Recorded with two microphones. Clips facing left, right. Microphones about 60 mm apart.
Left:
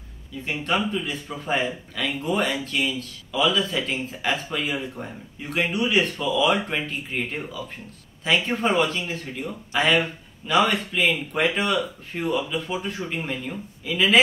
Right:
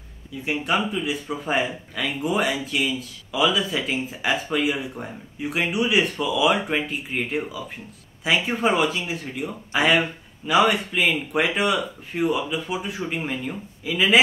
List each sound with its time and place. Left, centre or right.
0.5 s speech: centre